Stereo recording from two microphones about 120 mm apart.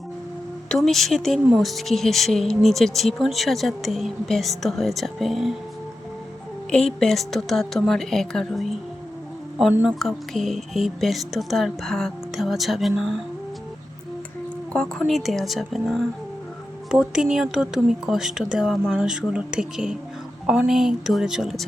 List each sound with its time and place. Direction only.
0.7 s speech: centre (ahead or behind)
6.7 s speech: 5° left (ahead or behind)
9.8 s speech: centre (ahead or behind)
14.7 s speech: 5° left (ahead or behind)
16.9 s speech: 5° right (ahead or behind)